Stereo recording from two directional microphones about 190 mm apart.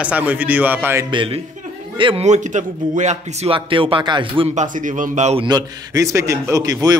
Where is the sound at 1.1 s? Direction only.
25° right (ahead or behind).